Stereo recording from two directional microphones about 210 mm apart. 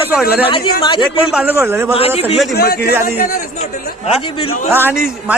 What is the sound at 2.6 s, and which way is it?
Speech, 50° left (ahead or behind).